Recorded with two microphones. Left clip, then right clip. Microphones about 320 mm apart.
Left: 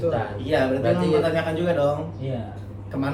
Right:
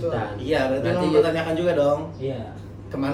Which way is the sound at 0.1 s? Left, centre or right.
Centre.